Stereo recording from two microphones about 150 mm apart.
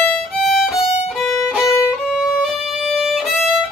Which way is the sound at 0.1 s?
Centre (ahead or behind).